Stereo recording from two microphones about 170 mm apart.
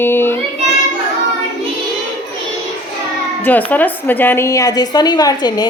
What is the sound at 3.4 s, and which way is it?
A woman's voice, 10° left (ahead or behind).